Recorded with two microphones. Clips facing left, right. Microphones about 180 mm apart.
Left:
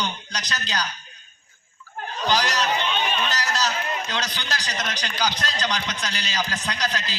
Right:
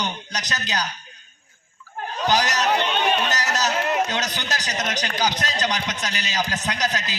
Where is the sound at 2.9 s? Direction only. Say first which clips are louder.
Right 3 dB; 60° right (ahead or behind).